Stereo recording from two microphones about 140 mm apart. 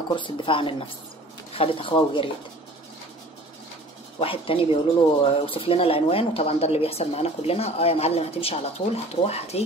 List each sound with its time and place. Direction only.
0.1 s a woman's voice: 35° left (ahead or behind)
4.2 s a woman's voice: 40° left (ahead or behind)